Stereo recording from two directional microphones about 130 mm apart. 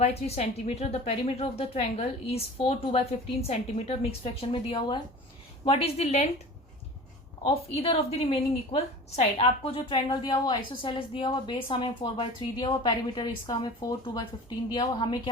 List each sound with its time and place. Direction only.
0.0 s speech: 55° left (ahead or behind)
5.6 s speech: 50° left (ahead or behind)
7.4 s speech: 45° left (ahead or behind)
10.1 s a woman's voice: 30° left (ahead or behind)